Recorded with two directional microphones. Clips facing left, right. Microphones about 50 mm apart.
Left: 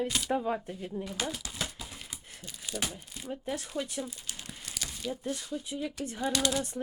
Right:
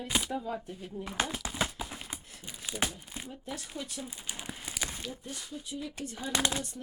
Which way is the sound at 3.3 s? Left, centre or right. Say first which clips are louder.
Left 7 dB; left.